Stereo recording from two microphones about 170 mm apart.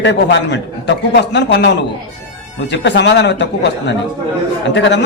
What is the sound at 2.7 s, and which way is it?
A man's voice, 90° left.